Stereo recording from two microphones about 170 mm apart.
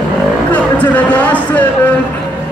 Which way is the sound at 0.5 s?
10° left (ahead or behind).